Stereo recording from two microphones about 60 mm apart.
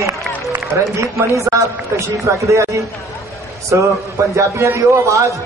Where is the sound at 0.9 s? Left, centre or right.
Right.